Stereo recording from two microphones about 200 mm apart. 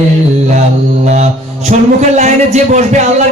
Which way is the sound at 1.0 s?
35° right (ahead or behind).